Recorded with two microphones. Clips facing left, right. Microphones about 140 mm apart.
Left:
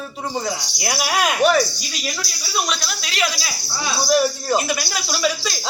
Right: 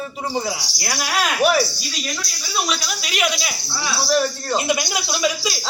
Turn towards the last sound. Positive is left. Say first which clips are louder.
# even
turn(degrees=-10)  # may be behind; listen again after turning